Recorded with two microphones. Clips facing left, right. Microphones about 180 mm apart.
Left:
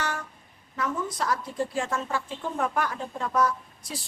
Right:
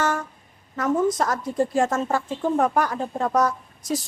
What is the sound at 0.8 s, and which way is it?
A woman's voice, 45° right (ahead or behind).